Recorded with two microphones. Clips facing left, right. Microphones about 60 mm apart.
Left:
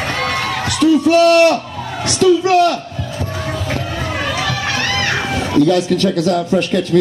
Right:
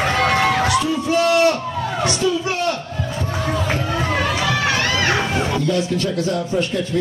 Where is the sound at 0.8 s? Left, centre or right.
Left.